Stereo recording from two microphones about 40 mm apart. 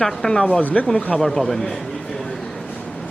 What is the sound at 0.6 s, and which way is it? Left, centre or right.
Speech, left.